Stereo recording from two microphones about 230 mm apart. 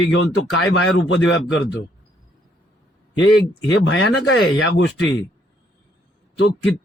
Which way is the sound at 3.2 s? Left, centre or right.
Left.